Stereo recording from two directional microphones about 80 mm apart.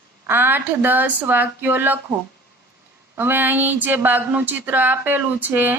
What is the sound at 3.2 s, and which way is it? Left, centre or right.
Speech, right.